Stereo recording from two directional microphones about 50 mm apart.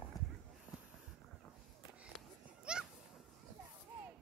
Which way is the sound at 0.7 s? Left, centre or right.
Right.